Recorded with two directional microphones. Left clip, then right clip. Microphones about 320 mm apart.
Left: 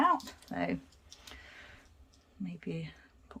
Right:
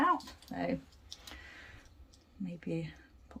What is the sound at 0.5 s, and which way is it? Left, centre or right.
Speech, centre.